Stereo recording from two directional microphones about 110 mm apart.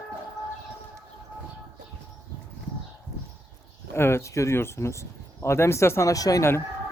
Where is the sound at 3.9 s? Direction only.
25° left (ahead or behind).